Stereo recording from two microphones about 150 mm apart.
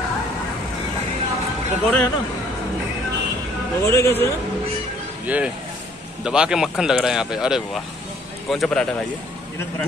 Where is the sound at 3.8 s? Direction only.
20° left (ahead or behind).